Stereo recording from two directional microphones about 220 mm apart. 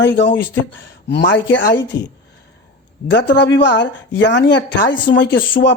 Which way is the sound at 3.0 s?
50° left (ahead or behind).